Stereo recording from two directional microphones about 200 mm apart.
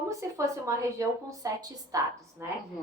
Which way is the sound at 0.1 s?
15° right (ahead or behind).